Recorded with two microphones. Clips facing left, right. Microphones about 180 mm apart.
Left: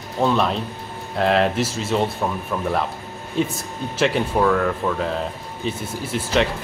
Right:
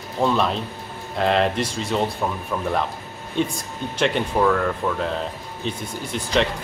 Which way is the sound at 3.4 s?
5° left (ahead or behind).